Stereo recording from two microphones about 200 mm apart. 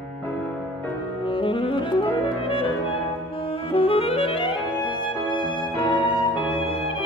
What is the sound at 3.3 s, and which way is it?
Music, 25° left (ahead or behind).